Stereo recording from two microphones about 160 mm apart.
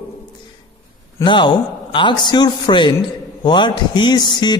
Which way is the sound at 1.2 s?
30° left (ahead or behind).